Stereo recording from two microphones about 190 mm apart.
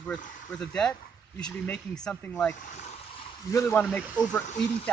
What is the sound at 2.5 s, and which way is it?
Speech, 40° left (ahead or behind).